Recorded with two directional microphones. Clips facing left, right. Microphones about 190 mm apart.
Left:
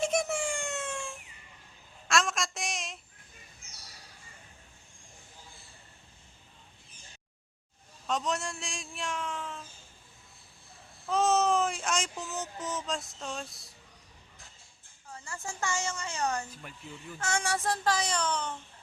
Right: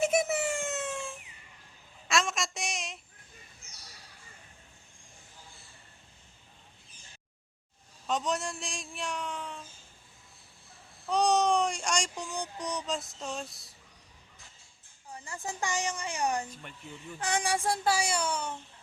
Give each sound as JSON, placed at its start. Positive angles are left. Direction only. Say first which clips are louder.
{"t": 0.0, "sound": "a sound", "louder": "right 2 dB", "side_deg": -5}
{"t": 8.0, "sound": "a man's voice", "louder": "right 1 dB", "side_deg": 0}
{"t": 11.1, "sound": "speech", "louder": "even", "side_deg": 0}
{"t": 15.1, "sound": "speech", "louder": "right 2 dB", "side_deg": -15}